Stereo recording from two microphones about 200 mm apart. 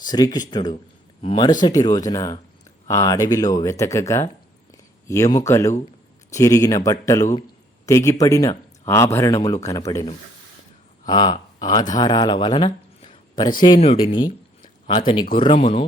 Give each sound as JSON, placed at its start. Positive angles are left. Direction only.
{"t": 0.0, "sound": "speech", "side_deg": 20}
{"t": 14.2, "sound": "a sound", "side_deg": 20}
{"t": 15.4, "sound": "speech", "side_deg": 25}